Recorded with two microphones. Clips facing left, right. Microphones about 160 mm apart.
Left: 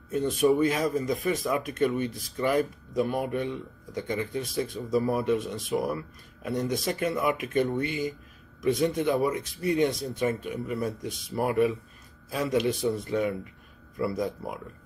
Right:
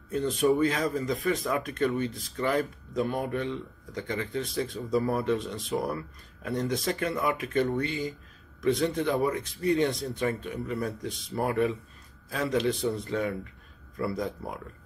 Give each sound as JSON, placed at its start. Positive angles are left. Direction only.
{"t": 0.1, "sound": "speech", "side_deg": 20}
{"t": 3.0, "sound": "speech", "side_deg": 10}